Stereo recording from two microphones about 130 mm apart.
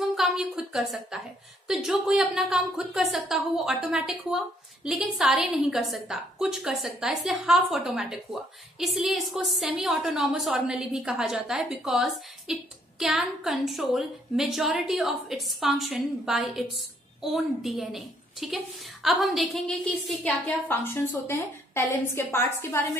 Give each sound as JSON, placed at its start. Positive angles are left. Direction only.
{"t": 0.1, "sound": "a woman's voice", "side_deg": 0}
{"t": 20.4, "sound": "a woman's voice", "side_deg": 15}